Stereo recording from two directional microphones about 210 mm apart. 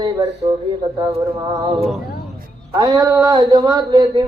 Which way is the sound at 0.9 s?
20° right (ahead or behind).